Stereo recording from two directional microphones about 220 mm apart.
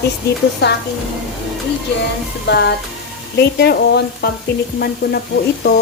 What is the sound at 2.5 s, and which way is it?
A woman's voice, 50° left (ahead or behind).